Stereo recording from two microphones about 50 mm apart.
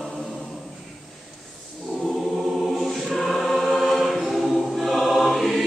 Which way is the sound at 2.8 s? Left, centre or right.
Centre.